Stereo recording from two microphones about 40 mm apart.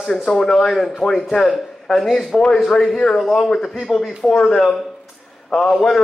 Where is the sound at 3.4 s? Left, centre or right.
Centre.